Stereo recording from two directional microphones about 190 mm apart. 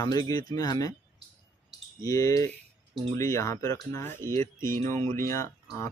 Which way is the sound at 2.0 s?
15° left (ahead or behind).